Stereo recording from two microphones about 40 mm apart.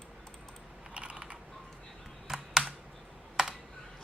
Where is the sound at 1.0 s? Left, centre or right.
Right.